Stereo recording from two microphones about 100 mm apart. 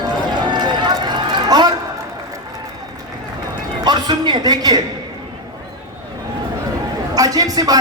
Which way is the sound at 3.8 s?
45° right (ahead or behind).